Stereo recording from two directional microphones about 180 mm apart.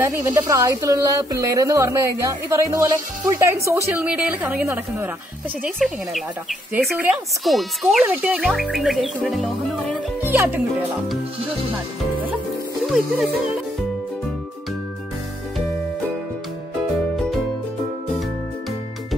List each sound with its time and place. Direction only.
0.0 s speech: 20° right (ahead or behind)
5.8 s speech: centre (ahead or behind)
10.2 s speech: 10° right (ahead or behind)